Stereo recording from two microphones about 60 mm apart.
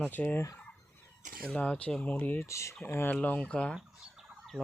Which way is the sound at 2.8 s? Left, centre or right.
Left.